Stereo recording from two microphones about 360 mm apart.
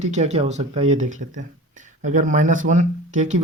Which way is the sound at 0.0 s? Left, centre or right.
Centre.